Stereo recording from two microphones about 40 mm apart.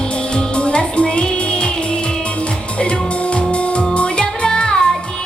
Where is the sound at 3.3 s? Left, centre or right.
Left.